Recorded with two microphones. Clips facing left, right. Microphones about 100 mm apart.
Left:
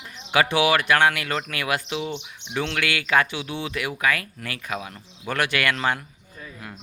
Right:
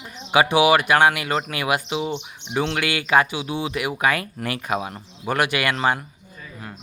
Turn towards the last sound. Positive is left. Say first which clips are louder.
# right 2 dB
turn(degrees=-25)  # may be behind; listen again after turning